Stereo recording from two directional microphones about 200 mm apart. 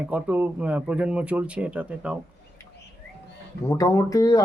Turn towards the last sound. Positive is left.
turn(degrees=20)  # may be behind; listen again after turning